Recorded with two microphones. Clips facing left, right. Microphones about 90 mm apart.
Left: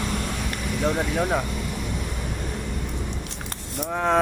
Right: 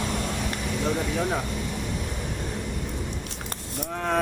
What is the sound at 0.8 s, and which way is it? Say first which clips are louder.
Speech: left 3 dB; 55° left (ahead or behind).